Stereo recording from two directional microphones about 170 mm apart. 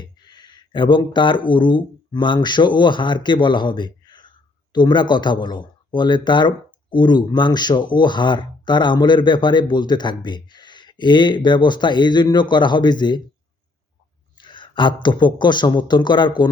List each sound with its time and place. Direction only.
0.0 s speech: 25° left (ahead or behind)
14.3 s speech: 30° left (ahead or behind)